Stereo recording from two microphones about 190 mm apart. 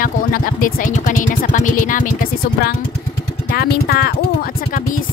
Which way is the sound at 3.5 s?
55° left (ahead or behind).